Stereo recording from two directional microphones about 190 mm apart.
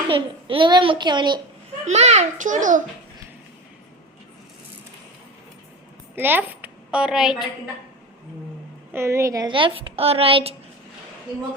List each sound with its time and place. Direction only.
0.1 s a woman's voice: 25° right (ahead or behind)
1.8 s a child's voice: 35° right (ahead or behind)
6.1 s a woman's voice: 10° right (ahead or behind)
8.9 s a woman's voice: 15° right (ahead or behind); by 10.5 s 30° right (ahead or behind)